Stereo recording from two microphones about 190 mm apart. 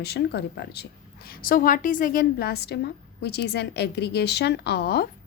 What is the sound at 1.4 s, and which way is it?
A woman's voice, 50° left (ahead or behind).